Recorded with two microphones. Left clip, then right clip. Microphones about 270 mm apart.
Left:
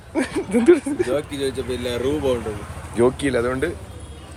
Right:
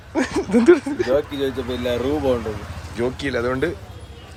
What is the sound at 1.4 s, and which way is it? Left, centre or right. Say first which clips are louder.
Speech: right 1 dB; centre.